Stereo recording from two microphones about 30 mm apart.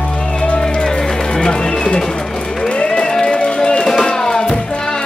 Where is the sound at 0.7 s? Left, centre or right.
Left.